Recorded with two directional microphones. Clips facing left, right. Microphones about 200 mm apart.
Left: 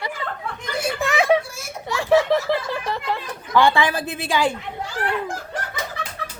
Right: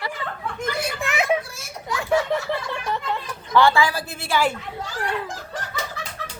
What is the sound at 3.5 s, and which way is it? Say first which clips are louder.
A woman's voice: even; 15° left (ahead or behind).